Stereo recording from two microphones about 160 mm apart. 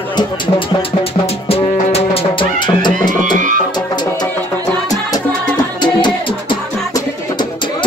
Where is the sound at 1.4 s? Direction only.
35° left (ahead or behind).